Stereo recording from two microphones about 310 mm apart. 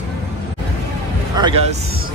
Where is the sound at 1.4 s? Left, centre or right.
Centre.